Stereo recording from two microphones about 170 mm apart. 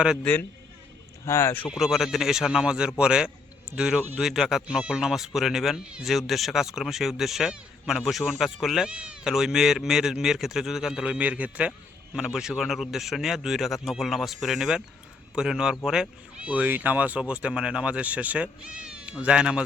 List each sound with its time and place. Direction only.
0.2 s speech: 10° left (ahead or behind)
1.7 s speech: centre (ahead or behind)